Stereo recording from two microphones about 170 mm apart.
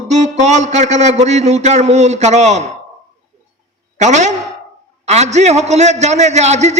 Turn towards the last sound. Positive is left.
turn(degrees=-40)  # may be behind; listen again after turning